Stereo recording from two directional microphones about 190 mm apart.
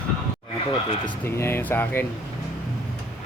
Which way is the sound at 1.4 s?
10° left (ahead or behind).